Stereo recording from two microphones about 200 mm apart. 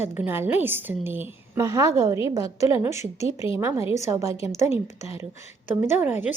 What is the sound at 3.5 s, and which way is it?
A woman's voice, 15° right (ahead or behind).